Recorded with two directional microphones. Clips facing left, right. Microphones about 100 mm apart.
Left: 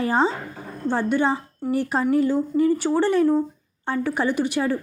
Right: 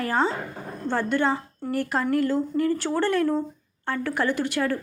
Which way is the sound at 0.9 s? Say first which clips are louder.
Left 2 dB; 15° left (ahead or behind).